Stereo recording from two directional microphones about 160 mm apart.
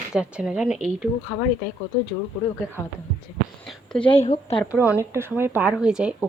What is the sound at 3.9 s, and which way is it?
Speech, 5° left (ahead or behind).